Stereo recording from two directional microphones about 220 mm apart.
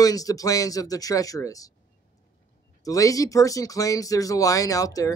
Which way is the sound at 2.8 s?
15° left (ahead or behind).